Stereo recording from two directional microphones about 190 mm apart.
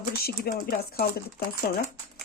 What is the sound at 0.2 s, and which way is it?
Speech, 55° left (ahead or behind).